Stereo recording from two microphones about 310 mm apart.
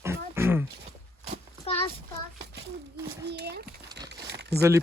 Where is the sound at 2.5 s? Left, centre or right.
Right.